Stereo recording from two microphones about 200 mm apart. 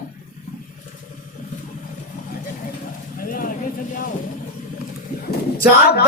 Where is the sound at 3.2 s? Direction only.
45° left (ahead or behind).